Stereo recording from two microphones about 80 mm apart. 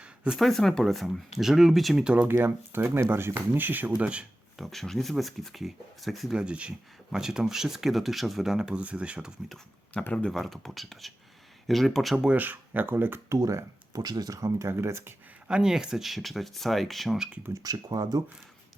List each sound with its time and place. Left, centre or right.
0.3 s speech: centre
2.2 s speech: right
4.5 s speech: centre
6.3 s speech: centre
9.9 s speech: centre
10.3 s speech: centre
12.1 s speech: centre; by 13.4 s right
13.4 s speech: right
14.0 s speech: right
15.4 s speech: centre
17.5 s speech: right